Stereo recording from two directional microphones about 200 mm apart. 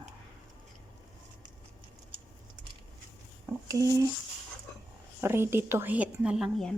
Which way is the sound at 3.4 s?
15° right (ahead or behind).